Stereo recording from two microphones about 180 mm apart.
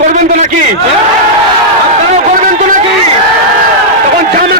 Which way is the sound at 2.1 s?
45° right (ahead or behind).